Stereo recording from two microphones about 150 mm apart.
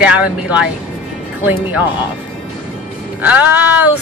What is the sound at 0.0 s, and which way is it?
Speech, 5° right (ahead or behind).